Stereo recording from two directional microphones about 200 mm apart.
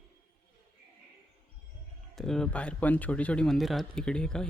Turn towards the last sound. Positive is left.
turn(degrees=5)  # may be behind; listen again after turning